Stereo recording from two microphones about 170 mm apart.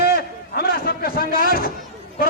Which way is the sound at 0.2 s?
65° left (ahead or behind).